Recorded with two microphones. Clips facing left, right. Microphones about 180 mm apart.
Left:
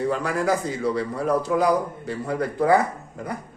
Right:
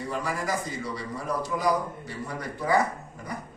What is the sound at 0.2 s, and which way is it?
Speech, 65° left (ahead or behind).